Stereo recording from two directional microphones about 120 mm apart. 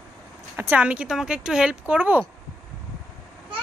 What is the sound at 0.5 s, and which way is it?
Speech, 15° right (ahead or behind).